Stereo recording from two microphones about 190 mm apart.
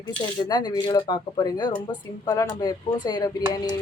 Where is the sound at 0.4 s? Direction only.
20° left (ahead or behind).